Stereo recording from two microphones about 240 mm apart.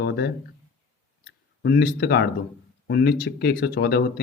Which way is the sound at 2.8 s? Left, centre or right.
Left.